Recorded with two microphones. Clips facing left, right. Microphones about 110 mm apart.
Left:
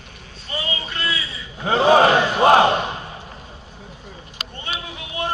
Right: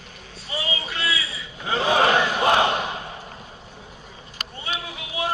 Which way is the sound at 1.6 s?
35° left (ahead or behind).